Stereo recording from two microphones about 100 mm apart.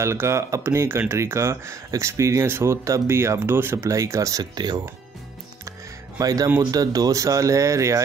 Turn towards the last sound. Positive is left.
turn(degrees=-30)  # may be behind; listen again after turning